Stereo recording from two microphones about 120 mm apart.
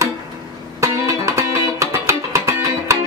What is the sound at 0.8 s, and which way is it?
Music, 25° right (ahead or behind).